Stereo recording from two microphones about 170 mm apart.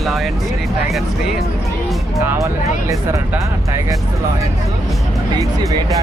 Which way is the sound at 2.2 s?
15° right (ahead or behind).